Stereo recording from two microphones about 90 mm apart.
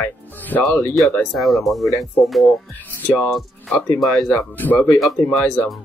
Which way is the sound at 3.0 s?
15° left (ahead or behind).